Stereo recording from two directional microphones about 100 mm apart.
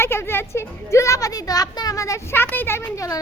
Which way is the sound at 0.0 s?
25° left (ahead or behind).